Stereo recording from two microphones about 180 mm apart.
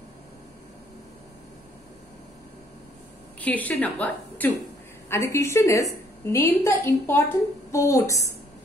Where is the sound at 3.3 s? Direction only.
10° left (ahead or behind).